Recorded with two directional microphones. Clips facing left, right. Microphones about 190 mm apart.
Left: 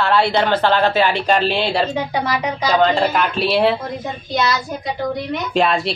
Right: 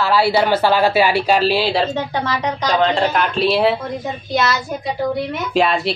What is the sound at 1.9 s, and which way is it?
A child's voice, 15° left (ahead or behind).